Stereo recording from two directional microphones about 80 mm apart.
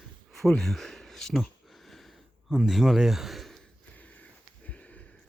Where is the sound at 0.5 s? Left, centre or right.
Centre.